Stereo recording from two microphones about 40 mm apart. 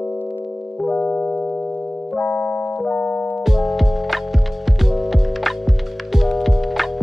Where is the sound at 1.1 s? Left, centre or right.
Left.